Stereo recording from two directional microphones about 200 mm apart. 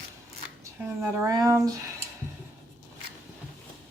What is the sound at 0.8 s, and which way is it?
Speech, 15° right (ahead or behind).